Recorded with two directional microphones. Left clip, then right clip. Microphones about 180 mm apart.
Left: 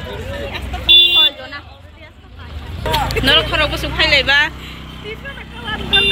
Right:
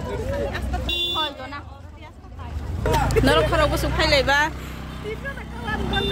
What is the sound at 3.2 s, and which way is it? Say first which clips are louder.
Speech: left 4 dB; 35° right (ahead or behind).